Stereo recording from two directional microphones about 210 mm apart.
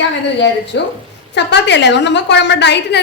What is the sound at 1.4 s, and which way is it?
A woman's voice, 55° left (ahead or behind).